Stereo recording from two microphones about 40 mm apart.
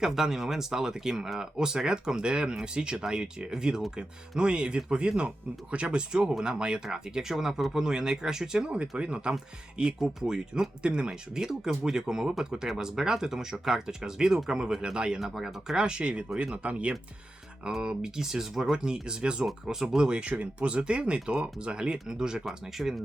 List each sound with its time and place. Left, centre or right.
0.0 s speech: centre
9.0 s speech: right
10.0 s speech: centre
10.3 s speech: right
15.2 s speech: centre
15.8 s speech: right
17.8 s speech: centre
19.6 s speech: centre
20.0 s speech: right
22.8 s speech: centre